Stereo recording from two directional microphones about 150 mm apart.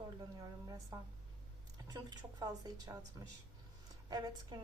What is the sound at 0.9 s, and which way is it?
A woman's voice, 20° right (ahead or behind).